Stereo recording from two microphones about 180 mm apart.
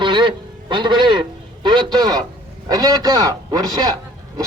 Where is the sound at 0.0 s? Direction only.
25° right (ahead or behind).